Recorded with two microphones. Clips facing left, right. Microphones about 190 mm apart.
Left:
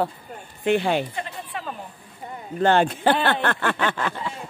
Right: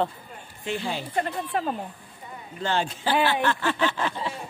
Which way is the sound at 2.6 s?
60° left (ahead or behind).